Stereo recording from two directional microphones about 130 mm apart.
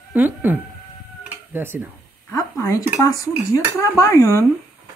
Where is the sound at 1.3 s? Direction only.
15° right (ahead or behind).